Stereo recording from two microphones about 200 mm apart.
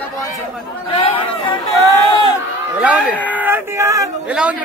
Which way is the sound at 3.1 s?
10° left (ahead or behind).